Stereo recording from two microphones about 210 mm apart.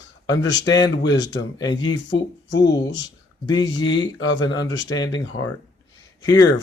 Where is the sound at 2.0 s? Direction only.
60° left (ahead or behind).